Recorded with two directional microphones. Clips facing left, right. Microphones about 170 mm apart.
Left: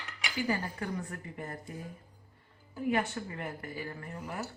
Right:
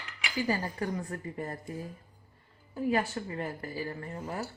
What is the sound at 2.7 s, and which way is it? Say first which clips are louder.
Speech: right 2 dB; 30° right (ahead or behind).